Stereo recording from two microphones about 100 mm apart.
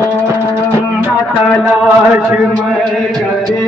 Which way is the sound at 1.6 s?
10° right (ahead or behind).